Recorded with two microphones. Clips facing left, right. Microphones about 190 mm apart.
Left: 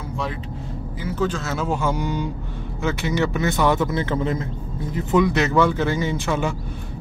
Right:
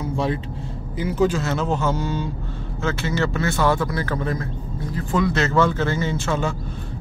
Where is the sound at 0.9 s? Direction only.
15° right (ahead or behind).